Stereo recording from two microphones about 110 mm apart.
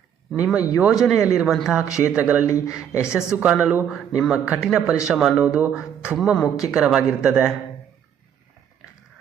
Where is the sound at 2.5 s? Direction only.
30° left (ahead or behind).